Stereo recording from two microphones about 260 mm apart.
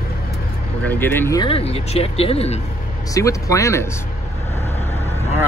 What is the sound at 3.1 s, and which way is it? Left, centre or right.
Speech, centre.